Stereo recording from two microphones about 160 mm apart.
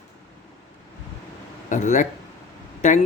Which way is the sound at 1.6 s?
50° left (ahead or behind).